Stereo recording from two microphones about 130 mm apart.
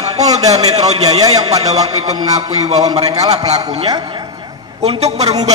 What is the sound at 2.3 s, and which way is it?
A woman's voice, 60° right (ahead or behind).